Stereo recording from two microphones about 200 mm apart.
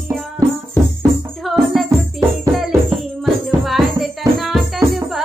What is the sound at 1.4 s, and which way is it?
Music, centre (ahead or behind).